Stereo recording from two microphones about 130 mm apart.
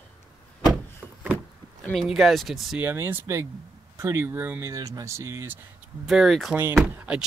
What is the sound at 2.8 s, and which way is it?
Speech, 15° right (ahead or behind).